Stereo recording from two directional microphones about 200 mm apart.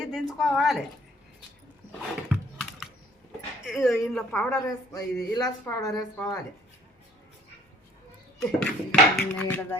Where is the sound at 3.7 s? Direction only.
Centre (ahead or behind); by 6.3 s 20° left (ahead or behind).